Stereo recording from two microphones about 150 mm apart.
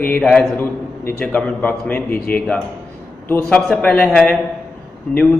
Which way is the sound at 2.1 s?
85° left.